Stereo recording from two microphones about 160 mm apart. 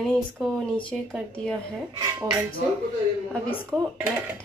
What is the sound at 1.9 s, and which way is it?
Speech, 25° right (ahead or behind).